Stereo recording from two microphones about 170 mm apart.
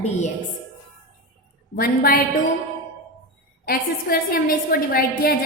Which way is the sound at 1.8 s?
60° left (ahead or behind).